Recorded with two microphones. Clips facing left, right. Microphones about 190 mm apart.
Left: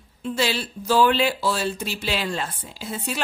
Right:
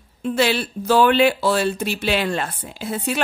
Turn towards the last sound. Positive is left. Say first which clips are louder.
# right 5 dB
turn(degrees=-60)  # may be behind; listen again after turning